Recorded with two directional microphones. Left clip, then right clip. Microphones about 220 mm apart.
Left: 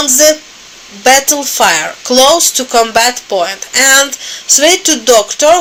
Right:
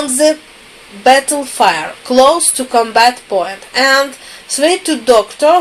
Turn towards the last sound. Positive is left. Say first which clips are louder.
# left 2 dB
turn(degrees=30)  # may be behind; listen again after turning